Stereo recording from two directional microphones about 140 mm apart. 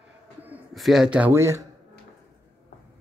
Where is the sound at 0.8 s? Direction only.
Centre (ahead or behind); by 1.6 s 20° right (ahead or behind).